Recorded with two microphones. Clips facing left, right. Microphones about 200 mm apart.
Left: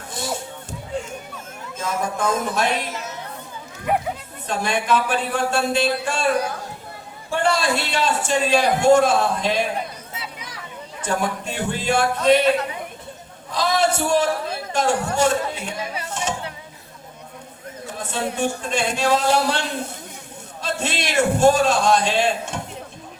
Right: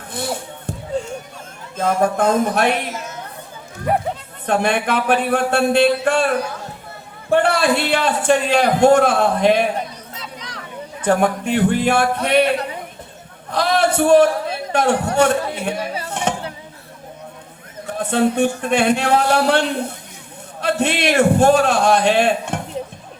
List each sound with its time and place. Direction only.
0.1 s a sound: 60° right (ahead or behind)
1.7 s a man's voice: 60° right (ahead or behind)
4.4 s a man's voice: 60° right (ahead or behind)
7.3 s a man's voice: 60° right (ahead or behind)
10.2 s a sound: 5° left (ahead or behind)
11.0 s a man's voice: 60° right (ahead or behind)
13.5 s a sound: 60° right (ahead or behind)
14.7 s a man's voice: 60° right (ahead or behind)
16.0 s music: 60° right (ahead or behind)
17.8 s a man's voice: 60° right (ahead or behind)